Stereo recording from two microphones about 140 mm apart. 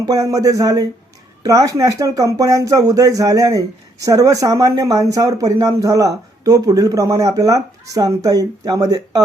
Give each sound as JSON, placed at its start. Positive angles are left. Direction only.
{"t": 0.0, "sound": "speech", "side_deg": -25}